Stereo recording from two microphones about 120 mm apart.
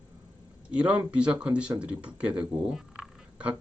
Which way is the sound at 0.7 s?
10° right (ahead or behind).